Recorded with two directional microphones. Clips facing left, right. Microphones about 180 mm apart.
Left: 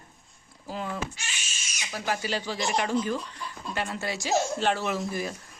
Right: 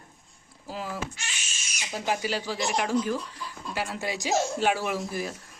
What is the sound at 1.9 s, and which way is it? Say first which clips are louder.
Speech: right 1 dB; 20° right (ahead or behind).